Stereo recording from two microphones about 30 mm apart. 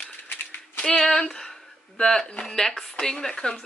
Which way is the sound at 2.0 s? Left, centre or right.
Left.